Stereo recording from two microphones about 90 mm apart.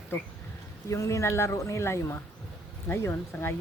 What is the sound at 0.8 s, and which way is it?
Speech, 35° left (ahead or behind).